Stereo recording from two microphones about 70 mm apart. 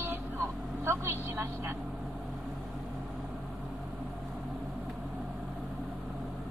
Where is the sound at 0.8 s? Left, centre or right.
Right.